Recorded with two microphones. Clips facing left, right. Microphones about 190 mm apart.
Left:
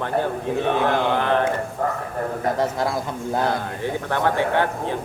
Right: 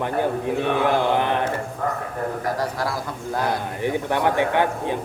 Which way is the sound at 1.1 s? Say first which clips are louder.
Left 1 dB; 15° right (ahead or behind).